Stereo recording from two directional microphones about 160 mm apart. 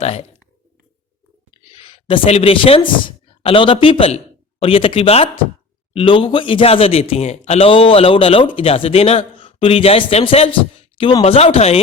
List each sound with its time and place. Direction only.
0.0 s speech: 40° left (ahead or behind)
1.8 s speech: 35° left (ahead or behind)